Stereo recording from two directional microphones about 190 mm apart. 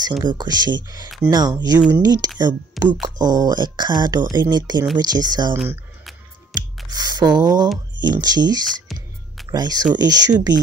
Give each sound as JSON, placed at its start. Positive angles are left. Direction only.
{"t": 0.2, "sound": "speech", "side_deg": -20}
{"t": 2.8, "sound": "speech", "side_deg": 0}
{"t": 3.2, "sound": "speech", "side_deg": -20}
{"t": 5.5, "sound": "speech", "side_deg": -10}
{"t": 6.5, "sound": "speech", "side_deg": -20}